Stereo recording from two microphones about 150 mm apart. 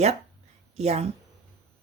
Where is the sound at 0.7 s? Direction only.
45° right (ahead or behind).